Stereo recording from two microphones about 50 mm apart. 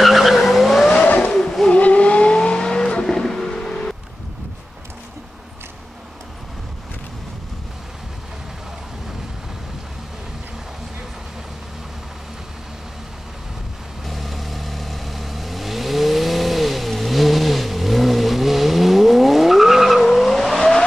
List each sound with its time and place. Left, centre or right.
0.0 s vehicle: centre
0.9 s vehicle: left
1.3 s vehicle: centre
1.7 s vehicle: left
14.0 s vehicle: centre